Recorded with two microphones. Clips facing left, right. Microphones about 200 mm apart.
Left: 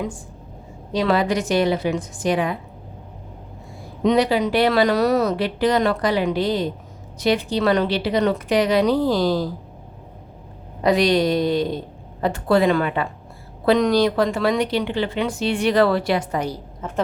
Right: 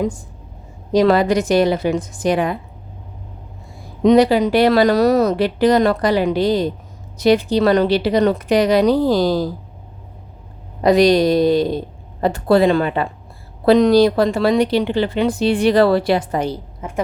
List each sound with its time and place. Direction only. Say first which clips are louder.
0.9 s speech: right 6 dB; 40° right (ahead or behind)
4.0 s speech: right 6 dB; 40° right (ahead or behind)
10.8 s speech: right 5 dB; 40° right (ahead or behind)
16.8 s a woman's voice: even; 15° right (ahead or behind)